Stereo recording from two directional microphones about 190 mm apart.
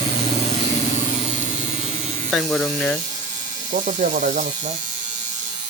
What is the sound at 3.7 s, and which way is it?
Speech, 40° right (ahead or behind).